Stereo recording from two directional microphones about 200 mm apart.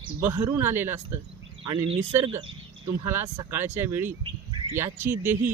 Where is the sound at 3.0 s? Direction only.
10° right (ahead or behind).